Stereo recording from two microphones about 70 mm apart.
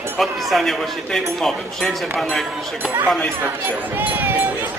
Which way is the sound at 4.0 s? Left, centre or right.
Right.